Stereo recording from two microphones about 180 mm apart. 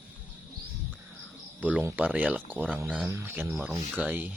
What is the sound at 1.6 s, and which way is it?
Speech, 10° right (ahead or behind).